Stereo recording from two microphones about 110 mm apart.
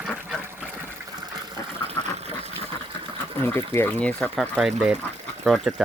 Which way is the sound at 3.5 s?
20° left (ahead or behind).